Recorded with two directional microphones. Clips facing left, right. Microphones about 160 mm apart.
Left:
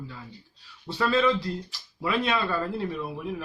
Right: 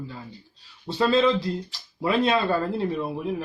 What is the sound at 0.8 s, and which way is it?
Speech, 25° right (ahead or behind).